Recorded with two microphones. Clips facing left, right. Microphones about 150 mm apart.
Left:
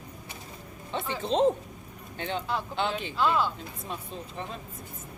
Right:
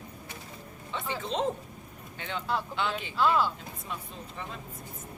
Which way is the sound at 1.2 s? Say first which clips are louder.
Left 7 dB; 30° left (ahead or behind).